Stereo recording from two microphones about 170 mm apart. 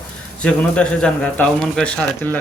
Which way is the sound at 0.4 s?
5° left (ahead or behind).